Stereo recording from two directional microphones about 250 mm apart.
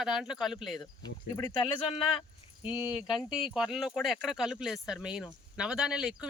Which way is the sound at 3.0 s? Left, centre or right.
Centre.